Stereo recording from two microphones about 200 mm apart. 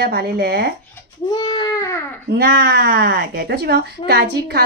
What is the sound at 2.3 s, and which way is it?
Speech, 55° right (ahead or behind).